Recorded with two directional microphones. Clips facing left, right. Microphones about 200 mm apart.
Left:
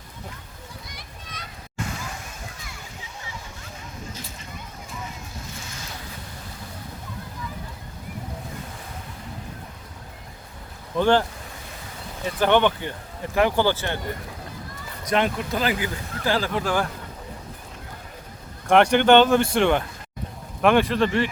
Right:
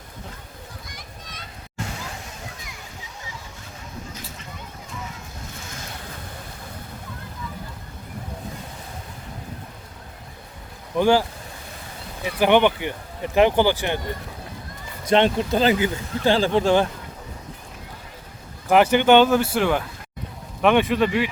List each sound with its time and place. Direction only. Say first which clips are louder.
10.9 s speech: right 1 dB; 10° right (ahead or behind)
15.0 s speech: right 5 dB; 30° right (ahead or behind)
18.7 s speech: even; 5° right (ahead or behind)